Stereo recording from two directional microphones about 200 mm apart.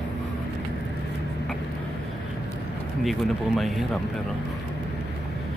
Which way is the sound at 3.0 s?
Centre (ahead or behind).